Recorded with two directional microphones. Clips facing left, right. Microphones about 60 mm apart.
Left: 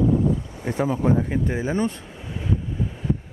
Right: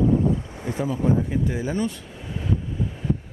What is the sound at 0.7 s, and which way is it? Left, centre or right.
Speech, left.